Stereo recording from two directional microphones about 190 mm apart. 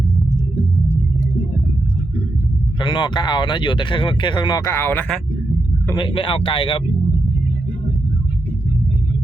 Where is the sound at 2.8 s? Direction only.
25° left (ahead or behind); by 5.2 s 5° left (ahead or behind).